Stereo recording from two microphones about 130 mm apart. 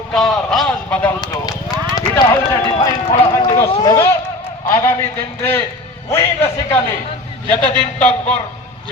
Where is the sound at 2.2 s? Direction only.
25° left (ahead or behind).